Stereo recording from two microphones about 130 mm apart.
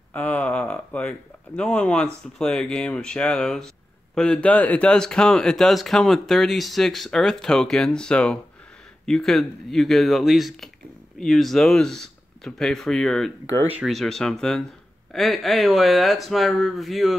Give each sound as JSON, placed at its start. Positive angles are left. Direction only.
{"t": 0.1, "sound": "speech", "side_deg": 10}